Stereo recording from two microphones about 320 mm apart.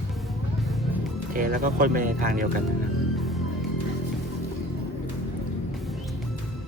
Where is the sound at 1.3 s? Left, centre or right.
Right.